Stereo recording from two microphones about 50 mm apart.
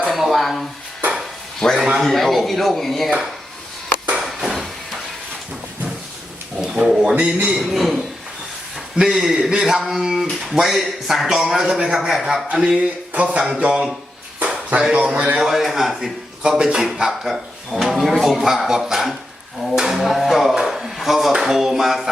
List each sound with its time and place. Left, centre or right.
0.1 s a sound: centre
1.5 s a man's voice: centre
4.2 s a sound: centre
6.6 s speech: centre
7.6 s speech: centre
9.0 s a man's voice: centre
12.8 s speech: right
14.3 s a sound: right
14.8 s a man's voice: centre
15.0 s speech: right
15.4 s speech: centre
16.4 s a man's voice: centre